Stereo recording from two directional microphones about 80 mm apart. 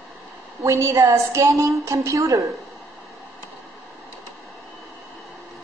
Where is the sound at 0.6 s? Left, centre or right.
Right.